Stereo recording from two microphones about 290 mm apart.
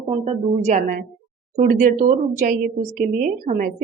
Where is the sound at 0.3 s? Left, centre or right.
Right.